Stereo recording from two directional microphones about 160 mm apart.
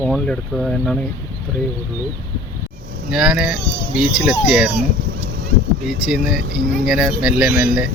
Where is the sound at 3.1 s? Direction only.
5° right (ahead or behind).